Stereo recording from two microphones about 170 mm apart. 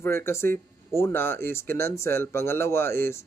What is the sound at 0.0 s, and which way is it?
Speech, 15° left (ahead or behind).